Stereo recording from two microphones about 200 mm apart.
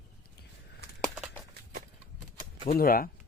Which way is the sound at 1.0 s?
Centre (ahead or behind).